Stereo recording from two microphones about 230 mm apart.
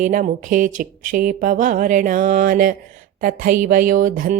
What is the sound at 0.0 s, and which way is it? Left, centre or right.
Speech, right.